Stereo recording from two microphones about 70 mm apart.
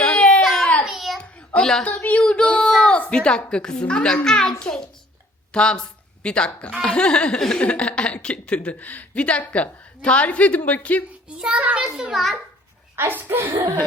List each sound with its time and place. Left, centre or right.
0.0 s a sound: centre
1.2 s a sound: centre
1.8 s speech: centre
11.3 s child singing: centre
12.1 s a child's voice: centre
13.0 s speech: right